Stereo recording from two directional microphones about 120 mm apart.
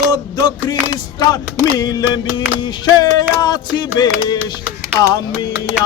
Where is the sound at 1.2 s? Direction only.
35° left (ahead or behind).